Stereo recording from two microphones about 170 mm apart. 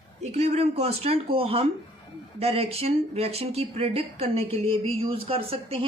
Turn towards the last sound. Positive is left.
turn(degrees=-35)  # may be behind; listen again after turning